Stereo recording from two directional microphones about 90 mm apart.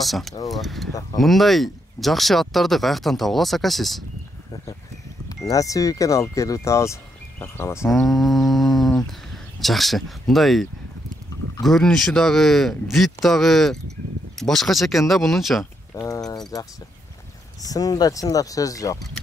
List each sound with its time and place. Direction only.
0.0 s speech: centre (ahead or behind)
5.3 s speech: 40° left (ahead or behind)
7.9 s a sound: centre (ahead or behind)
9.6 s speech: centre (ahead or behind)
15.9 s a sound: 35° left (ahead or behind)
17.6 s speech: 45° left (ahead or behind)